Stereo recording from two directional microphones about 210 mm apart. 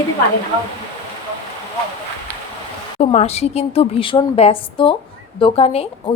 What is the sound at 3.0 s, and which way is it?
A woman's voice, 30° left (ahead or behind).